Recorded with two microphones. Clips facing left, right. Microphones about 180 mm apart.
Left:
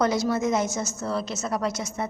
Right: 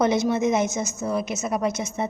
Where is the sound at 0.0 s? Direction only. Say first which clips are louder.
Right 3 dB; 20° right (ahead or behind).